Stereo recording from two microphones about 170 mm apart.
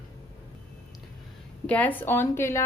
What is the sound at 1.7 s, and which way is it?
Speech, 10° left (ahead or behind).